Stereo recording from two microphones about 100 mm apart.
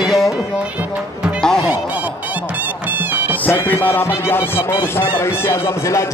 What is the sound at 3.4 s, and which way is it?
Speech, 25° left (ahead or behind).